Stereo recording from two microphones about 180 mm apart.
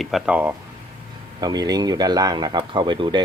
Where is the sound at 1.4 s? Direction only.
20° right (ahead or behind).